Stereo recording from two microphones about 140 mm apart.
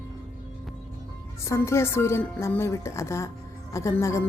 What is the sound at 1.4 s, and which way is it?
A woman's voice, 20° left (ahead or behind).